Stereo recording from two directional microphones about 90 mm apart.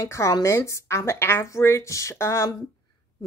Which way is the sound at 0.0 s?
35° left (ahead or behind).